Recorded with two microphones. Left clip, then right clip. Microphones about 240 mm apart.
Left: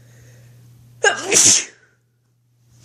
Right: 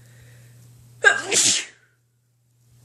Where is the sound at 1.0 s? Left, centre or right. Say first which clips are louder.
Left 2 dB; left.